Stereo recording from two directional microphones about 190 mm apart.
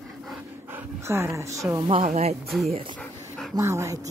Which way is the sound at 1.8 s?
35° right (ahead or behind).